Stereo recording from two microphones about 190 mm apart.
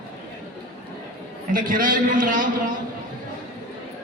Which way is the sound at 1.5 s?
45° right (ahead or behind).